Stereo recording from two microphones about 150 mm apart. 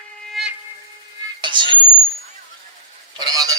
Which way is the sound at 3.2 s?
25° right (ahead or behind).